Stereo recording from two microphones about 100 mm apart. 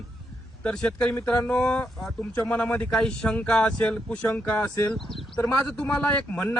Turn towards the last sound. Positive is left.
turn(degrees=10)  # may be behind; listen again after turning